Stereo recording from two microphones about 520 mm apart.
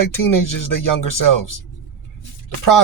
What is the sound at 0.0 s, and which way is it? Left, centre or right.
Speech, left.